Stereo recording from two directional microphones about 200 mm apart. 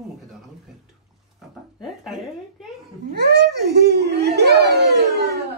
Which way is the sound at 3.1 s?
55° right (ahead or behind).